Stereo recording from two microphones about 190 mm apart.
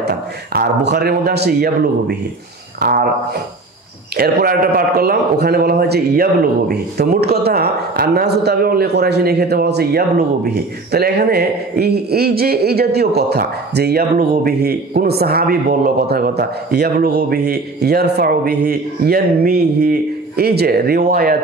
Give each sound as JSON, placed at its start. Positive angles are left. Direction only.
{"t": 0.0, "sound": "speech", "side_deg": -55}
{"t": 2.8, "sound": "a sound", "side_deg": -50}
{"t": 4.2, "sound": "speech", "side_deg": -55}